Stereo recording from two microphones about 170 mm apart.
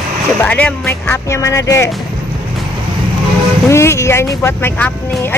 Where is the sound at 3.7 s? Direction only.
15° left (ahead or behind).